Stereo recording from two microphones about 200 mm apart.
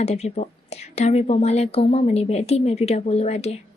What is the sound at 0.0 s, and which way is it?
A woman's voice, 35° left (ahead or behind).